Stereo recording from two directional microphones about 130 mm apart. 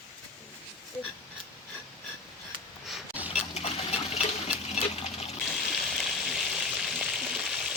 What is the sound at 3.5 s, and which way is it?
Water, 55° left (ahead or behind).